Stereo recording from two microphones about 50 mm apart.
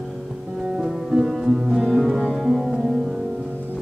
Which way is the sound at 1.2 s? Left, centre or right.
Centre.